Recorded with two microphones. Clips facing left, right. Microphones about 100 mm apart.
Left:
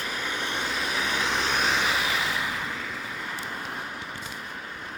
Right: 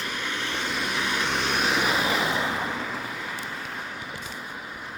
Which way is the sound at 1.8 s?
25° right (ahead or behind).